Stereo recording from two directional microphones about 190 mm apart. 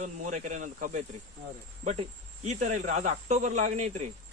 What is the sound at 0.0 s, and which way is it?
Speech, 40° right (ahead or behind).